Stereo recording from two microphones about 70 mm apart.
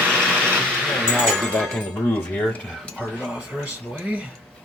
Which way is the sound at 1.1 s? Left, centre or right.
Centre.